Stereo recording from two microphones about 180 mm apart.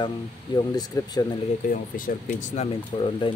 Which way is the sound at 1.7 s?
50° left (ahead or behind).